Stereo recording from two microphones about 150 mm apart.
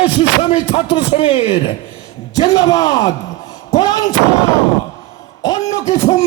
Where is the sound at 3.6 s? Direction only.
25° left (ahead or behind).